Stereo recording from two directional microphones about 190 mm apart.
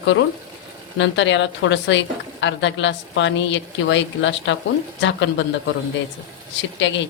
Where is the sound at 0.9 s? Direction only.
75° left (ahead or behind).